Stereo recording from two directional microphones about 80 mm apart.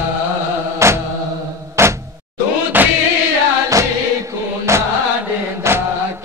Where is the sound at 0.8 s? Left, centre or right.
Right.